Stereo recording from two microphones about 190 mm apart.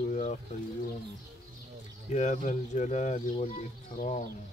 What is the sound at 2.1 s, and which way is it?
Speech, 40° left (ahead or behind).